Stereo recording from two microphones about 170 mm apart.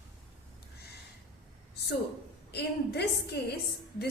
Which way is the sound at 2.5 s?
75° left (ahead or behind).